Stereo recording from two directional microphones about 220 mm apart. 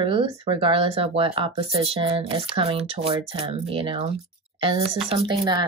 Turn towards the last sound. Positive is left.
turn(degrees=-15)  # may be behind; listen again after turning